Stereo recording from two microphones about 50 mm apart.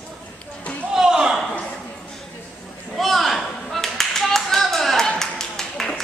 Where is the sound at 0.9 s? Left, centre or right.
Centre.